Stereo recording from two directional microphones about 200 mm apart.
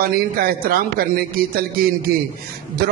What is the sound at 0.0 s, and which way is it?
A man's voice, 50° right (ahead or behind).